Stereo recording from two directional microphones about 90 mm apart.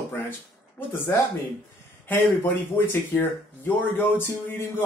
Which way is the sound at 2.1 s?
20° left (ahead or behind).